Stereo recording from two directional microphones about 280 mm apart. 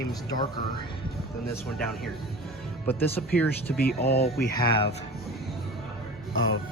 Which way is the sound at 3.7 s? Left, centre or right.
Left.